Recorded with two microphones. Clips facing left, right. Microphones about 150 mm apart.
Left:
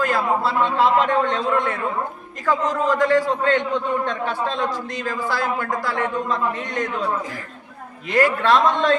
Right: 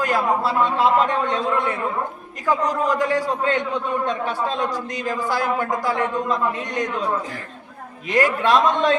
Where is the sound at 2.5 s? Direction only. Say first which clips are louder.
Even; 15° right (ahead or behind).